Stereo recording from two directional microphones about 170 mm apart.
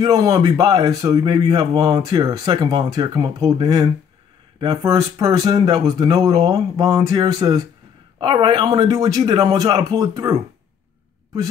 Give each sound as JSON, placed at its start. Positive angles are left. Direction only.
{"t": 0.0, "sound": "speech", "side_deg": -25}